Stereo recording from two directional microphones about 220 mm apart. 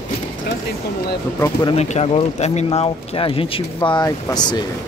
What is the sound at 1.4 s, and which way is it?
Speech, 20° left (ahead or behind).